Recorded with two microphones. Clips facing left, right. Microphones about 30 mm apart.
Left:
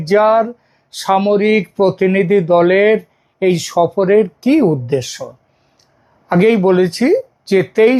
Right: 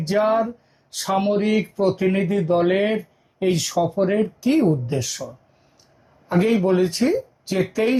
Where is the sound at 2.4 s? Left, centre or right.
Left.